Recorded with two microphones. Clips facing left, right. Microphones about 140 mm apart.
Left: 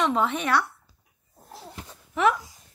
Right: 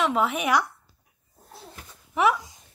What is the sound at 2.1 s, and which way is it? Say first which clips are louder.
Speech: even; 10° right (ahead or behind).